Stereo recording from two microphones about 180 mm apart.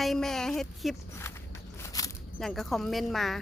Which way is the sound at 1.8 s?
20° left (ahead or behind).